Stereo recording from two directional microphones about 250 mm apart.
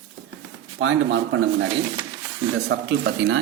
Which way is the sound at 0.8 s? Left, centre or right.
Right.